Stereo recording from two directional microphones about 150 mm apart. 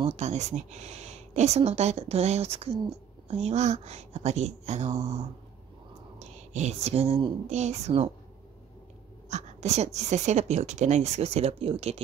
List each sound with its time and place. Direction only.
0.0 s speech: 45° right (ahead or behind)
4.9 s speech: 20° right (ahead or behind)
6.1 s speech: 50° right (ahead or behind)
7.4 s speech: 50° right (ahead or behind)
9.3 s speech: 50° right (ahead or behind)